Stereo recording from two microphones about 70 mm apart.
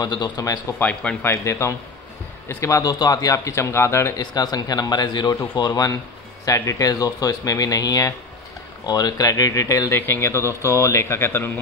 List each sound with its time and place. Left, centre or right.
0.0 s speech: left
0.7 s speech: centre
1.2 s a man's voice: left
4.2 s a man's voice: left
5.7 s speech: left
8.8 s speech: left
10.0 s a man's voice: left